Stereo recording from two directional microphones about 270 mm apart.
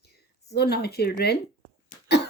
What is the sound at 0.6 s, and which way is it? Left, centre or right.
Speech, left.